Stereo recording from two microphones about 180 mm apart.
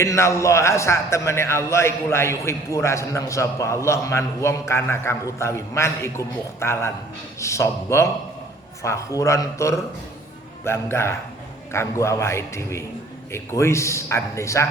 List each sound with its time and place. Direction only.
0.0 s a man's voice: 15° left (ahead or behind)